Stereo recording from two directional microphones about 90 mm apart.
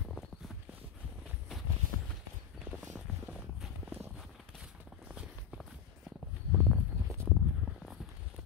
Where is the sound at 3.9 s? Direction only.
20° right (ahead or behind).